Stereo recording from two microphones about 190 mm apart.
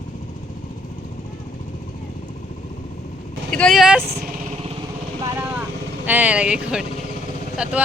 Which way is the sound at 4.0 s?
55° right (ahead or behind).